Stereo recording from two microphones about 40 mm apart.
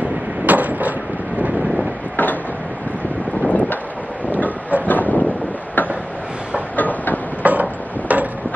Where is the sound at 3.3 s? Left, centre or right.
Left.